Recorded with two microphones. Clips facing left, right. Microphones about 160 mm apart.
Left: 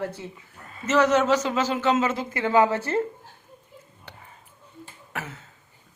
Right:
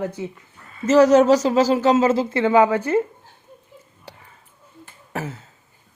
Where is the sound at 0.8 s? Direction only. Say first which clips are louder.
Right 7 dB; 40° right (ahead or behind); by 3.0 s 15° right (ahead or behind).